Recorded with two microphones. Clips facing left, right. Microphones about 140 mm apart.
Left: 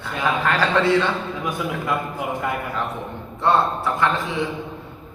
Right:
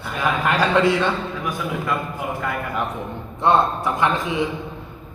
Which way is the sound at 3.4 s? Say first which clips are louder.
Right 1 dB; 15° right (ahead or behind).